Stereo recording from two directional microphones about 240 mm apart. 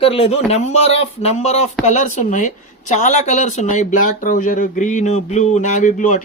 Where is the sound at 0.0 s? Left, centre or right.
Left.